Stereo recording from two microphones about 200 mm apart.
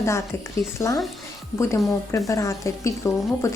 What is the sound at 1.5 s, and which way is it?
A woman's voice, 15° left (ahead or behind).